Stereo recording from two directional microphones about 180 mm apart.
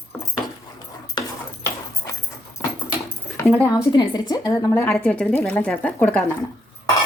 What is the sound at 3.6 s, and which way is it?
A woman's voice, 15° left (ahead or behind).